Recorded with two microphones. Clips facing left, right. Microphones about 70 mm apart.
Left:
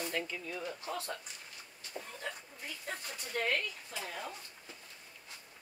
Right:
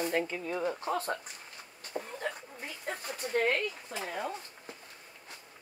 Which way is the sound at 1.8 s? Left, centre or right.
Right.